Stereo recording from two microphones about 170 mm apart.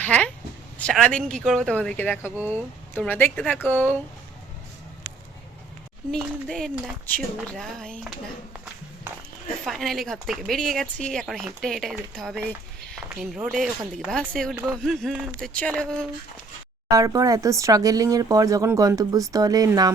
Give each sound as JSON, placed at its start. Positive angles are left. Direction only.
{"t": 0.0, "sound": "a sound", "side_deg": 10}
{"t": 0.8, "sound": "speech", "side_deg": 5}
{"t": 2.2, "sound": "speech", "side_deg": -10}
{"t": 2.9, "sound": "speech", "side_deg": 10}
{"t": 6.1, "sound": "speech", "side_deg": 5}
{"t": 9.6, "sound": "speech", "side_deg": 0}
{"t": 16.9, "sound": "speech", "side_deg": -20}